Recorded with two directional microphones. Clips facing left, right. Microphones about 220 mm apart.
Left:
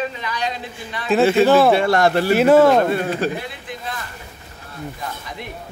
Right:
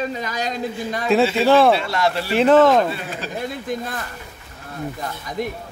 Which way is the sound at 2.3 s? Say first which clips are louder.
Left 1 dB; 10° left (ahead or behind).